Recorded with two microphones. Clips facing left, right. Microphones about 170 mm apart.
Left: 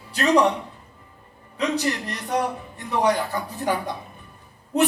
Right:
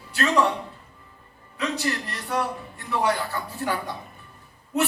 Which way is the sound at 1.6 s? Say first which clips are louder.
Left 3 dB; 20° left (ahead or behind).